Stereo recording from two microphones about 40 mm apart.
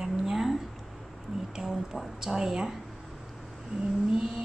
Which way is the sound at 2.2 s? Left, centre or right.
Centre.